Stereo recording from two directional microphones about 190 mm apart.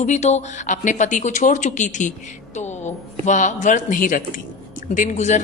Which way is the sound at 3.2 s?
40° left (ahead or behind).